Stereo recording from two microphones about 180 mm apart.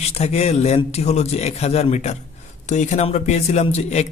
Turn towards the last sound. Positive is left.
turn(degrees=35)  # may be behind; listen again after turning